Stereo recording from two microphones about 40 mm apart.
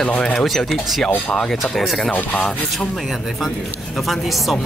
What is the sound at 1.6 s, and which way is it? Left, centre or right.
Speech, centre.